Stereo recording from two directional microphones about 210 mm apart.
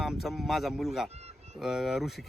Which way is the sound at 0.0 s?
Centre (ahead or behind).